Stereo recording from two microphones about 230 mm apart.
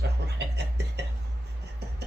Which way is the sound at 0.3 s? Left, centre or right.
Right.